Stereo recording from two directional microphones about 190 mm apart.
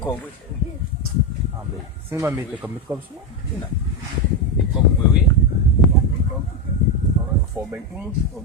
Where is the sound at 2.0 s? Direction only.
15° right (ahead or behind).